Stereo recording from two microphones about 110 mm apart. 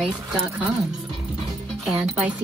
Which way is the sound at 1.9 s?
5° right (ahead or behind).